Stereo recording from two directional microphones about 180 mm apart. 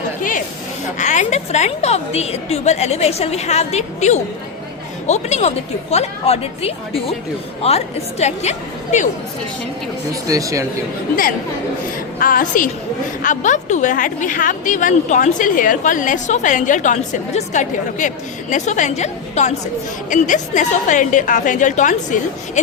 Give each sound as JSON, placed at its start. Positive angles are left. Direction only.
{"t": 0.2, "sound": "a sound", "side_deg": 45}
{"t": 0.9, "sound": "a woman's voice", "side_deg": 40}
{"t": 10.1, "sound": "speech", "side_deg": -20}
{"t": 12.2, "sound": "a woman's voice", "side_deg": 50}